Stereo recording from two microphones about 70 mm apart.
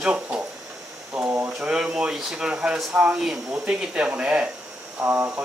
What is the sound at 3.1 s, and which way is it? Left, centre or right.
Speech, centre.